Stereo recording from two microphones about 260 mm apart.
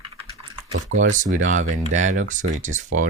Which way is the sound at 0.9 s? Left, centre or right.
Right.